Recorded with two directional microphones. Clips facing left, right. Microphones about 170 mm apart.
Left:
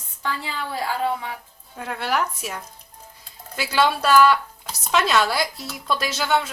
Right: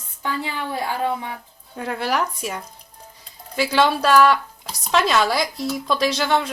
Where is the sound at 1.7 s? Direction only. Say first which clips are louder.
Right 2 dB; centre (ahead or behind).